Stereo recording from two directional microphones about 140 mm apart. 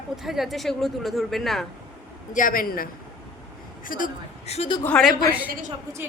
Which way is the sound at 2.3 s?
80° left.